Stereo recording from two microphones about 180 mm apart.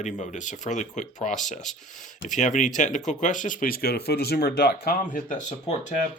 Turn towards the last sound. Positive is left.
turn(degrees=40)  # may be behind; listen again after turning